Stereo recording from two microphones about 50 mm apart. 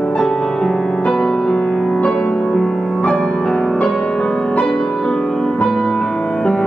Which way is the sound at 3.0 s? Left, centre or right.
Left.